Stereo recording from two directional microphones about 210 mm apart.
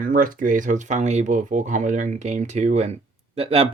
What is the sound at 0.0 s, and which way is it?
Speech, 40° right (ahead or behind).